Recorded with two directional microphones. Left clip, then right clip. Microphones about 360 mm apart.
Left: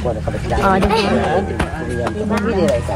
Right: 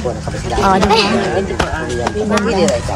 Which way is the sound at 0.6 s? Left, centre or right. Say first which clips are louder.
Right 4 dB; centre.